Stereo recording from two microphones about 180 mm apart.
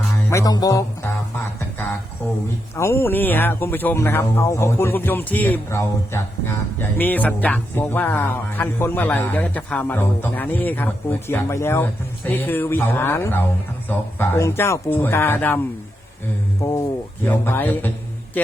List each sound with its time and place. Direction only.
0.3 s music: 20° left (ahead or behind)
2.7 s speech: 15° left (ahead or behind)